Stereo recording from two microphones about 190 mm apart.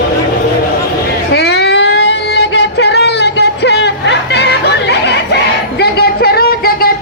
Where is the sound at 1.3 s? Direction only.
60° left (ahead or behind).